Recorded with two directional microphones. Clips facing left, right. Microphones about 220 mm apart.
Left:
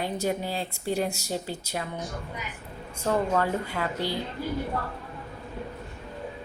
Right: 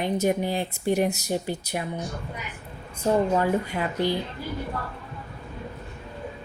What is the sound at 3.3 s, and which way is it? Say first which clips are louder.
Speech: right 3 dB; 15° right (ahead or behind).